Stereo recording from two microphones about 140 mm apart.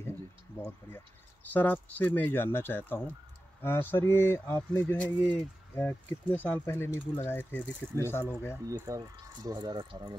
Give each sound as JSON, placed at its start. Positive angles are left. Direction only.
{"t": 0.7, "sound": "speech", "side_deg": 15}
{"t": 8.6, "sound": "speech", "side_deg": -25}